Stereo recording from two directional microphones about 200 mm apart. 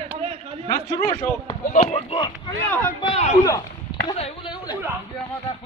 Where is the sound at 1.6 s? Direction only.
40° left (ahead or behind).